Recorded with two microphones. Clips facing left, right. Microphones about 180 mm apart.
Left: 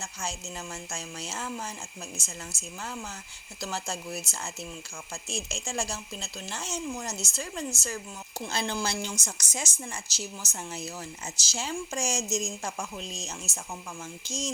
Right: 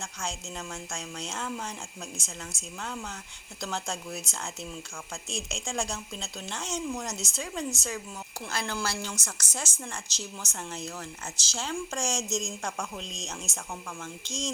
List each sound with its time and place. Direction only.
0.0 s speech: 5° left (ahead or behind)
8.4 s a woman's voice: 20° left (ahead or behind)